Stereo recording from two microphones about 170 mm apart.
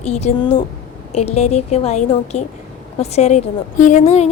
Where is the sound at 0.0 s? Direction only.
40° left (ahead or behind).